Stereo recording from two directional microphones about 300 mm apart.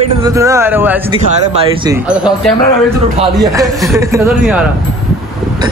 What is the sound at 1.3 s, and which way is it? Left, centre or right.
Speech, right.